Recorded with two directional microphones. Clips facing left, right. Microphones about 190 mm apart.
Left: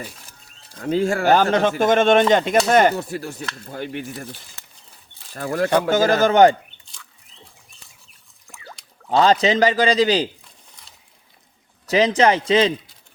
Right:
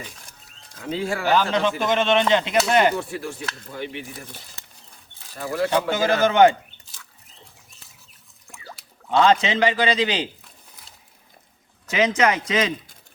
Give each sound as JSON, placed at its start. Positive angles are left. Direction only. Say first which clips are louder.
{"t": 0.8, "sound": "a man's voice", "louder": "left 6 dB", "side_deg": 45}
{"t": 5.4, "sound": "a man's voice", "louder": "left 3 dB", "side_deg": 50}
{"t": 8.4, "sound": "a sound", "louder": "even", "side_deg": 0}
{"t": 9.0, "sound": "a man's voice", "louder": "left 2 dB", "side_deg": 35}
{"t": 11.9, "sound": "a man's voice", "louder": "left 4 dB", "side_deg": 35}